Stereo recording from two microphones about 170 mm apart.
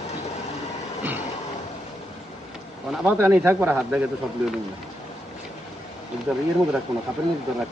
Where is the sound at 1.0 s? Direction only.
10° right (ahead or behind).